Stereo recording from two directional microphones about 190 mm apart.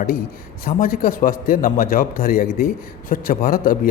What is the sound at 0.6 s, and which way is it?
A man's voice, 50° left (ahead or behind).